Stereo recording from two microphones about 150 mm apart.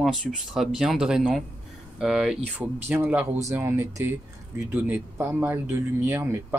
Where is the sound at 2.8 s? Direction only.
15° right (ahead or behind).